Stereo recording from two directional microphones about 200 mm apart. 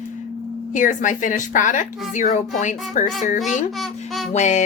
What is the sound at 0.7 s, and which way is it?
A woman's voice, 40° left (ahead or behind).